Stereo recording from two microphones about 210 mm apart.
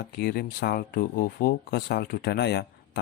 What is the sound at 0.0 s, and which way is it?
Speech, 45° left (ahead or behind).